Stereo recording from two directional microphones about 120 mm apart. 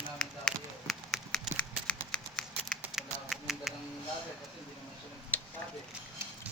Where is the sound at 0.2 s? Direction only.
5° left (ahead or behind).